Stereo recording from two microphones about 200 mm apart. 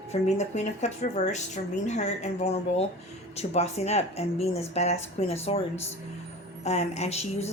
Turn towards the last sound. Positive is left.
turn(degrees=35)  # may be behind; listen again after turning